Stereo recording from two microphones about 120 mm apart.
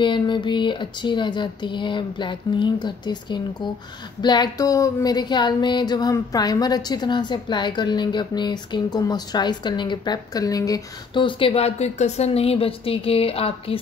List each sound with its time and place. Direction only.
0.0 s a woman's voice: 40° left (ahead or behind)
11.1 s speech: 45° left (ahead or behind)